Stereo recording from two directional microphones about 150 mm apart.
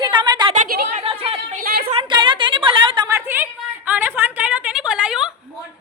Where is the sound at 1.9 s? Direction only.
35° right (ahead or behind).